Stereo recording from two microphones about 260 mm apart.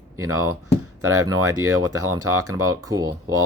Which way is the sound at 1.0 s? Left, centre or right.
Right.